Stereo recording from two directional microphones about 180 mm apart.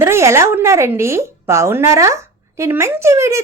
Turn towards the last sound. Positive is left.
turn(degrees=-15)  # may be behind; listen again after turning